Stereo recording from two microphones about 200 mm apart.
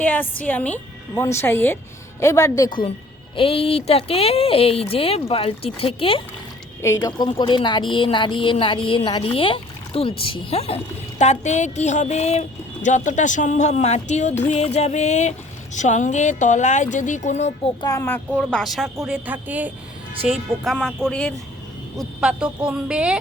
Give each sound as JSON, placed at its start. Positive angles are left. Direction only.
{"t": 0.0, "sound": "a woman's voice", "side_deg": 10}
{"t": 17.8, "sound": "a woman's voice", "side_deg": 15}
{"t": 19.0, "sound": "a sound", "side_deg": -5}
{"t": 20.2, "sound": "speech", "side_deg": 0}